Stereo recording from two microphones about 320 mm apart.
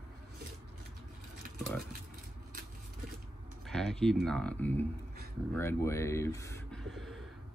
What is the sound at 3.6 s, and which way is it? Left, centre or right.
Speech, centre.